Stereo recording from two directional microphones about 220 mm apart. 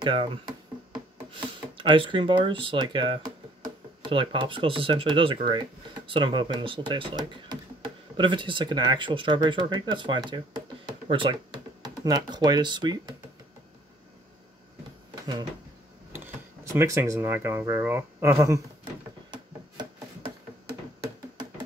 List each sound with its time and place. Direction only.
0.0 s speech: 25° right (ahead or behind)
16.1 s speech: 10° right (ahead or behind)
19.3 s a sound: 20° right (ahead or behind)